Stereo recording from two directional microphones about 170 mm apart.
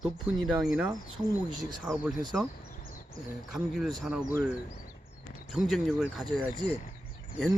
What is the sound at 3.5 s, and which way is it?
Speech, centre (ahead or behind).